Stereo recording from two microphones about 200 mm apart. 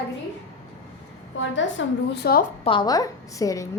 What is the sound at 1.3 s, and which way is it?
A woman's voice, 65° left (ahead or behind).